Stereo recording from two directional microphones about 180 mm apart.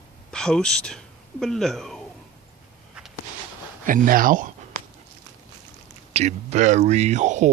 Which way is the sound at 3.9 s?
50° right (ahead or behind).